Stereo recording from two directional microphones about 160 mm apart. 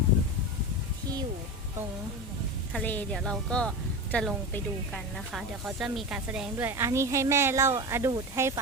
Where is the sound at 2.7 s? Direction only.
5° left (ahead or behind).